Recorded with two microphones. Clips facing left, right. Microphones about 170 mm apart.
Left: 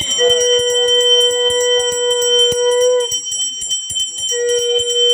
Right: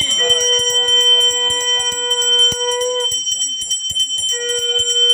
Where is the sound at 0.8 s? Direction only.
40° left (ahead or behind).